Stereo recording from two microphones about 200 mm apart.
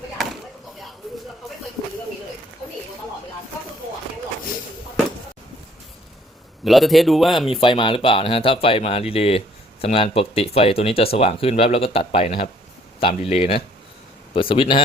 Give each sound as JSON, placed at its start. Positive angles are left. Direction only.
{"t": 6.7, "sound": "speech", "side_deg": 0}
{"t": 7.6, "sound": "speech", "side_deg": 25}